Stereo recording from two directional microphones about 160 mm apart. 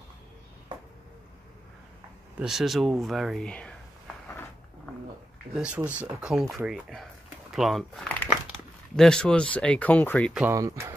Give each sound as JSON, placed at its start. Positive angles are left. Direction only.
{"t": 2.3, "sound": "speech", "side_deg": -5}
{"t": 5.5, "sound": "speech", "side_deg": -5}
{"t": 10.5, "sound": "speech", "side_deg": -20}